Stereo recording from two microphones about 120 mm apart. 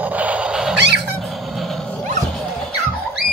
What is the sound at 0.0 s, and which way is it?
Cat, 15° right (ahead or behind).